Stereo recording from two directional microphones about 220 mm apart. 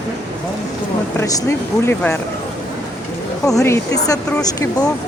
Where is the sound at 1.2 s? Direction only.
10° left (ahead or behind).